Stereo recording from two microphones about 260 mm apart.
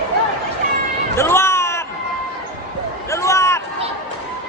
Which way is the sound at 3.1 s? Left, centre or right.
Centre.